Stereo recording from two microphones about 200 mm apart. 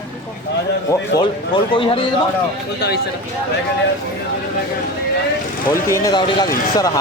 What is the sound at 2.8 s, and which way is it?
Speech, 55° left (ahead or behind).